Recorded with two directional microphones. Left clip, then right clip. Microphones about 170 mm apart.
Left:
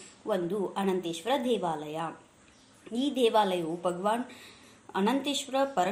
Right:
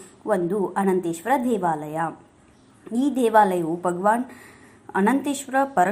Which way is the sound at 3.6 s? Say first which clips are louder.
Right 8 dB; 15° right (ahead or behind).